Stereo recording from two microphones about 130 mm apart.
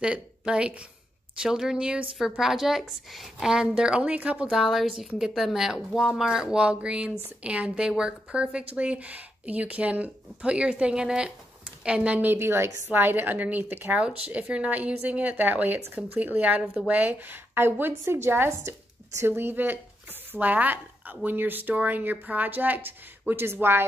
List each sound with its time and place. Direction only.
0.0 s a woman's voice: 5° right (ahead or behind)